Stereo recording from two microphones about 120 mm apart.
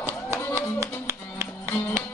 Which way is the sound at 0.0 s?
25° right (ahead or behind).